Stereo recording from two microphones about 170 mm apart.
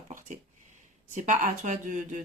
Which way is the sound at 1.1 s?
50° right (ahead or behind).